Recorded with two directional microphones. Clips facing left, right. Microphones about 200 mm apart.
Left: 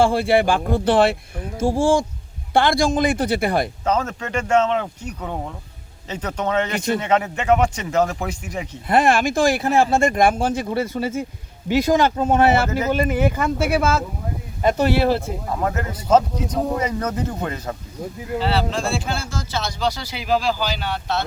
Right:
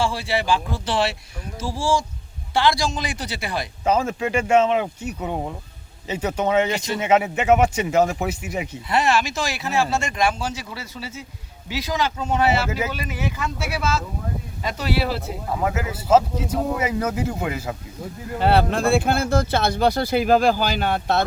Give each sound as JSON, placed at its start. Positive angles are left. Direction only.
{"t": 0.0, "sound": "speech", "side_deg": 55}
{"t": 3.8, "sound": "speech", "side_deg": -10}
{"t": 8.9, "sound": "speech", "side_deg": 55}
{"t": 15.4, "sound": "speech", "side_deg": -5}
{"t": 18.3, "sound": "speech", "side_deg": -55}